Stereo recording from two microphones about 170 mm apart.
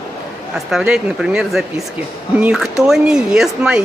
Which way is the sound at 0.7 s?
5° right (ahead or behind).